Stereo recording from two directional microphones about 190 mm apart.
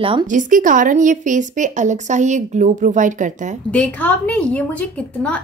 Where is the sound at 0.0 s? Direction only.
30° right (ahead or behind).